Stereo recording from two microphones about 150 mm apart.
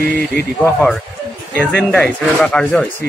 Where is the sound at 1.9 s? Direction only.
5° left (ahead or behind).